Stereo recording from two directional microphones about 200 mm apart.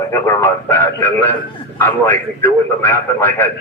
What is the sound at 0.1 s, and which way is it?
A man's voice, 10° left (ahead or behind).